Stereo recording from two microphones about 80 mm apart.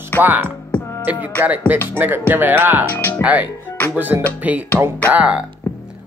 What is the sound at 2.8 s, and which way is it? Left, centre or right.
Speech, left.